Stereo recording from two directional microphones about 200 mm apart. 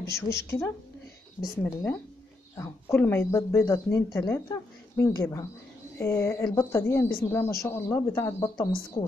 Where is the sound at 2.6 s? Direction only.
10° left (ahead or behind).